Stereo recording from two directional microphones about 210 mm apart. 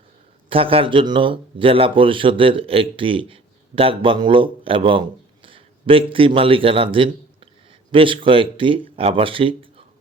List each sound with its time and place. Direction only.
0.5 s a man's voice: 25° right (ahead or behind)